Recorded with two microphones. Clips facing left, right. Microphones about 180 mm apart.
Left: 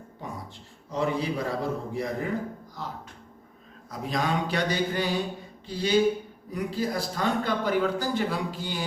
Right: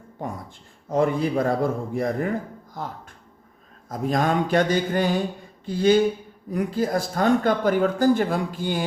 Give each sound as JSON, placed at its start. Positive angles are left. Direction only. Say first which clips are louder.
{"t": 0.2, "sound": "speech", "louder": "right 6 dB", "side_deg": -50}